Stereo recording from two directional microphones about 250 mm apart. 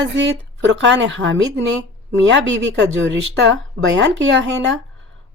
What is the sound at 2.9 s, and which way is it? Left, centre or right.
Speech, right.